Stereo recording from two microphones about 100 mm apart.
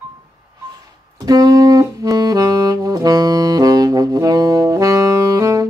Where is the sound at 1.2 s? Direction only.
40° right (ahead or behind).